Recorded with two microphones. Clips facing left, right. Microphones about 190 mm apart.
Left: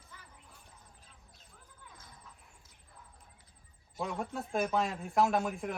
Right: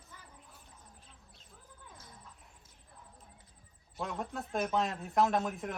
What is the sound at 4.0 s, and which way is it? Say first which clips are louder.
A man's voice: left 2 dB; centre (ahead or behind).